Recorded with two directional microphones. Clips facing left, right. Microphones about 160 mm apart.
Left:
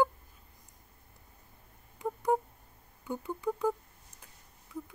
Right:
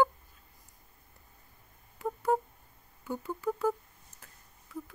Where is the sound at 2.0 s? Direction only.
20° left (ahead or behind).